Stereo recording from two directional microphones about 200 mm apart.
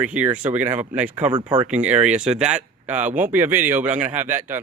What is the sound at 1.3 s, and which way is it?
Speech, 25° right (ahead or behind).